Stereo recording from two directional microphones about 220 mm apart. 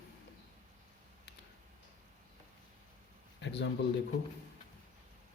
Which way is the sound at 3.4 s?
55° left (ahead or behind).